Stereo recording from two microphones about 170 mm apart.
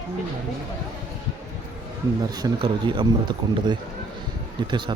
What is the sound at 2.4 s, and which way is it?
A man's voice, 25° right (ahead or behind).